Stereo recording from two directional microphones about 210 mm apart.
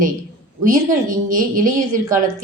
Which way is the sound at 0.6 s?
40° right (ahead or behind).